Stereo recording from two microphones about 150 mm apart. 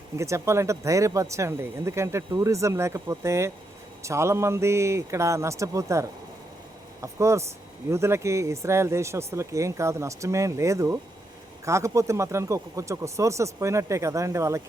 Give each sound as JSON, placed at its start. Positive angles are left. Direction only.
{"t": 0.2, "sound": "speech", "side_deg": -20}